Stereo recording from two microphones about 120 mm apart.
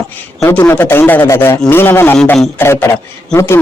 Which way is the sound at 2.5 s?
20° left (ahead or behind).